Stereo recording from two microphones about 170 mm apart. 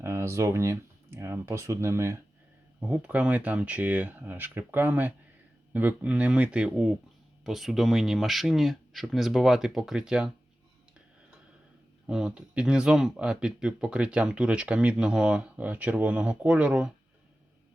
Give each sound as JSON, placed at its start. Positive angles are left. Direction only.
{"t": 0.0, "sound": "speech", "side_deg": -15}
{"t": 12.0, "sound": "speech", "side_deg": -5}